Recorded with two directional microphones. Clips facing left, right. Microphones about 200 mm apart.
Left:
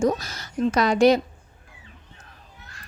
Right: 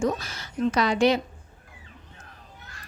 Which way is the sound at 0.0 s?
40° left (ahead or behind).